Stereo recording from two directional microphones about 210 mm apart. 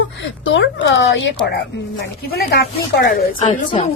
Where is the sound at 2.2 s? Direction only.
50° left (ahead or behind).